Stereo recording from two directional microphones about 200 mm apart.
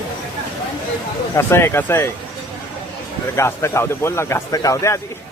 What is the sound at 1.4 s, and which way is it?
Speech, 10° left (ahead or behind).